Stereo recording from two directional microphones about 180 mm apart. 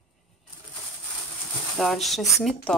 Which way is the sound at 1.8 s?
Centre (ahead or behind).